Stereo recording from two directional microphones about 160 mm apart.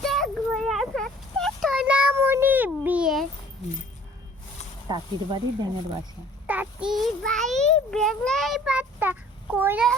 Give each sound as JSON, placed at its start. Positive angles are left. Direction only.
{"t": 0.0, "sound": "a sound", "side_deg": 0}
{"t": 4.9, "sound": "speech", "side_deg": -30}
{"t": 6.5, "sound": "a child's voice", "side_deg": -10}